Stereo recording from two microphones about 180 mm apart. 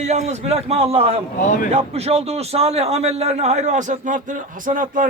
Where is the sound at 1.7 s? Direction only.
35° right (ahead or behind).